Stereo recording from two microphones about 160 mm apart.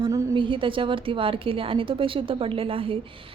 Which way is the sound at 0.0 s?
30° right (ahead or behind).